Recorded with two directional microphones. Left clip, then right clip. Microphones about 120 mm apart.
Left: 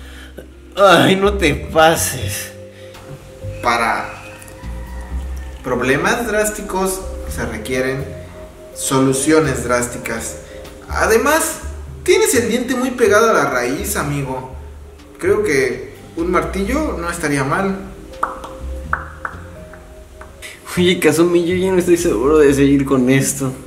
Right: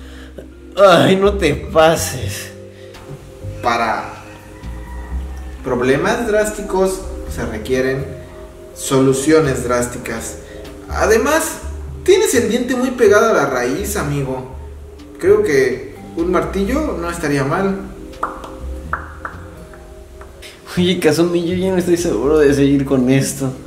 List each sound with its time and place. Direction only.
0.7 s speech: centre (ahead or behind)
3.6 s speech: 5° left (ahead or behind)
5.7 s speech: 5° left (ahead or behind)
18.2 s music: centre (ahead or behind)
20.6 s speech: centre (ahead or behind)